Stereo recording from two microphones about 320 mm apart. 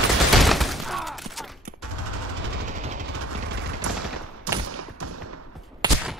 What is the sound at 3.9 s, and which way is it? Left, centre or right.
Machine gun, right.